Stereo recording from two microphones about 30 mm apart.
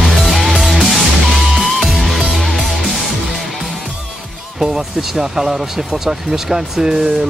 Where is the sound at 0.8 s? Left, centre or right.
Centre.